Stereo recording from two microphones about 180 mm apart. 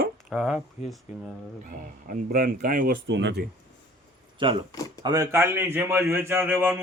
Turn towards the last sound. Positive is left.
turn(degrees=-10)  # may be behind; listen again after turning